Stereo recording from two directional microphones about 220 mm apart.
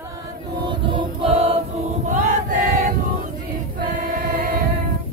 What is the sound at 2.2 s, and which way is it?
Choir, 40° right (ahead or behind).